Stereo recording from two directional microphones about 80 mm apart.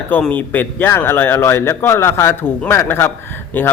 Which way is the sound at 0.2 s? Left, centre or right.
Left.